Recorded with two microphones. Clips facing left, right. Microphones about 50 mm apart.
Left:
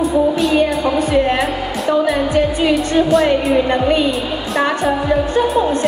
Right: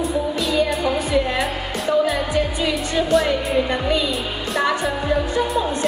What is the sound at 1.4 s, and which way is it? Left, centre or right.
Music, left.